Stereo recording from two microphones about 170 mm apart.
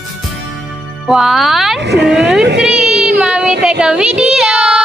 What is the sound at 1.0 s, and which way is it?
Speech, centre (ahead or behind).